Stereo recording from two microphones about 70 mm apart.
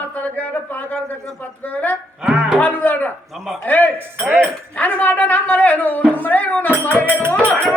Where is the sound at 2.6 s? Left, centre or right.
Left.